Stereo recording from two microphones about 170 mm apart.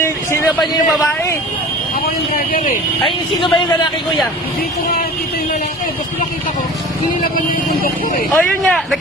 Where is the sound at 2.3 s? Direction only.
55° left (ahead or behind).